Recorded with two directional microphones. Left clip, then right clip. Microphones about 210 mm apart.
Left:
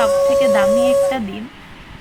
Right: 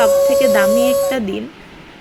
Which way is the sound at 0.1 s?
35° right (ahead or behind).